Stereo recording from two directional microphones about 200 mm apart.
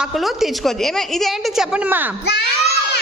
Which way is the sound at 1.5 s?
10° right (ahead or behind).